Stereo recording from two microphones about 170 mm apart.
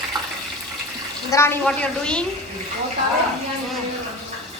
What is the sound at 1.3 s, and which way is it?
Speech, 15° left (ahead or behind).